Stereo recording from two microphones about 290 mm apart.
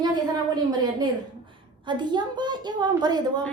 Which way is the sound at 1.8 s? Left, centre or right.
Centre.